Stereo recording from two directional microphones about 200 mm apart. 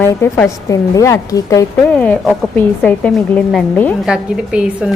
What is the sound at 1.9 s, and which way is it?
A woman's voice, 5° left (ahead or behind).